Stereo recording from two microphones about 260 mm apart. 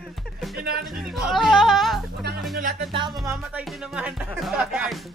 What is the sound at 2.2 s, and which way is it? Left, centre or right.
Music, right.